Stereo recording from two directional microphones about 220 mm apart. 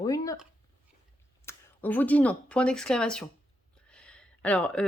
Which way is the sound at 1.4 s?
10° left (ahead or behind).